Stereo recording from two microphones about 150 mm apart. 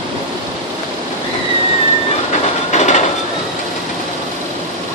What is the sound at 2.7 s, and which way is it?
Train, 50° left (ahead or behind).